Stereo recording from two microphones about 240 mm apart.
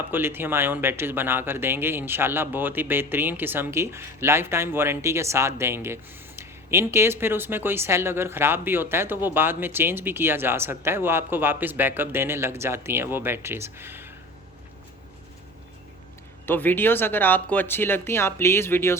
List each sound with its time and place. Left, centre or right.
0.1 s speech: centre
16.5 s speech: centre